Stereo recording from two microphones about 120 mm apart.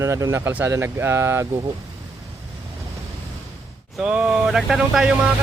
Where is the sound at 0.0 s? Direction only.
25° right (ahead or behind).